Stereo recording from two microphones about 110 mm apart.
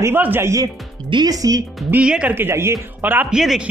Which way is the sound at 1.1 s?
40° right (ahead or behind).